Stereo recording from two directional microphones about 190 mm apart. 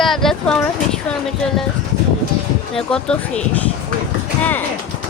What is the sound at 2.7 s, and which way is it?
Speech, 5° left (ahead or behind).